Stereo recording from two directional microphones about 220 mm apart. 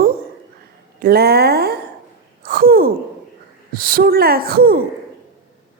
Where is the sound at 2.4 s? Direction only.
40° right (ahead or behind).